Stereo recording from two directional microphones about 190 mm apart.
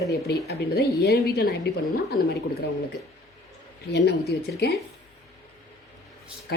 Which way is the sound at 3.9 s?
60° left (ahead or behind).